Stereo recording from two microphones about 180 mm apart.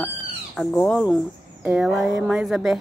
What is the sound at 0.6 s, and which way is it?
A woman's voice, centre (ahead or behind).